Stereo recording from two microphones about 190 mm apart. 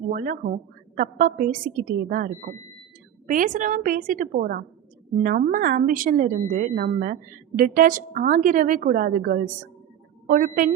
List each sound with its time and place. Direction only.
0.1 s a woman's voice: 45° right (ahead or behind)